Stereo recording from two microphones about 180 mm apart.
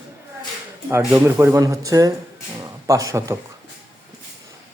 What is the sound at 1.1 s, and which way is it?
Speech, 10° right (ahead or behind).